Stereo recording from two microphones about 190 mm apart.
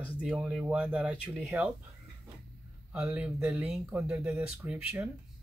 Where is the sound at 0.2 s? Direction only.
Centre (ahead or behind).